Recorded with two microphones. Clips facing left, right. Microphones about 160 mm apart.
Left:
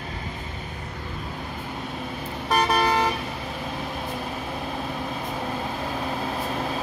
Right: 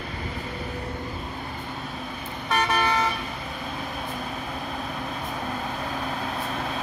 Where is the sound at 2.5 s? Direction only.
35° left (ahead or behind).